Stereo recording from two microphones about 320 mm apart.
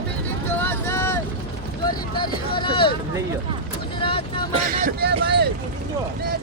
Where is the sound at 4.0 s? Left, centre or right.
Centre.